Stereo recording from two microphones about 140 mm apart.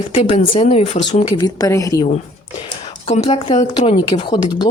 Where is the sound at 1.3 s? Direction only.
25° left (ahead or behind).